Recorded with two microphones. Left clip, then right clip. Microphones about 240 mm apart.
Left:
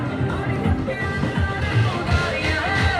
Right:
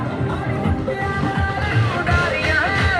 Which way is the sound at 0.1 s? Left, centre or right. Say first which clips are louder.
Right 1 dB; right.